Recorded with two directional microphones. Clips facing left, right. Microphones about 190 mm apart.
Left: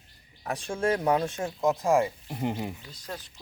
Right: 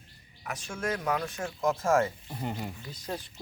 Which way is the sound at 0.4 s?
30° left (ahead or behind).